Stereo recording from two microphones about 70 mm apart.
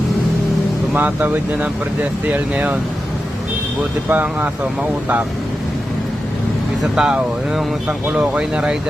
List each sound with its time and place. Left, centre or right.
0.9 s speech: right
4.1 s speech: right
6.9 s speech: centre